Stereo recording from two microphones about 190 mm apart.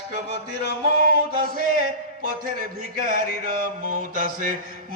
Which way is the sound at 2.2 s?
45° right (ahead or behind).